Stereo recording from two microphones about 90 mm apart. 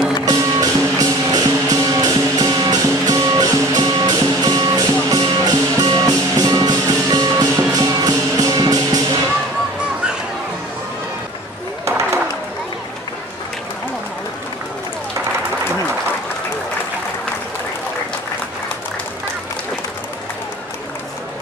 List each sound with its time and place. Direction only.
0.2 s music: 45° right (ahead or behind)